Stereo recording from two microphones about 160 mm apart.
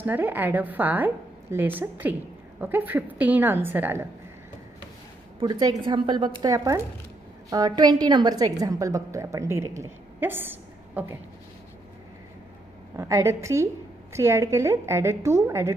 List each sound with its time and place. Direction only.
0.0 s a woman's voice: 10° right (ahead or behind)
5.4 s a woman's voice: 25° right (ahead or behind)
13.0 s a woman's voice: 20° right (ahead or behind)